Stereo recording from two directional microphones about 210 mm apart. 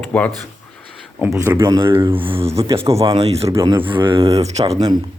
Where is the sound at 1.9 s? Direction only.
25° right (ahead or behind).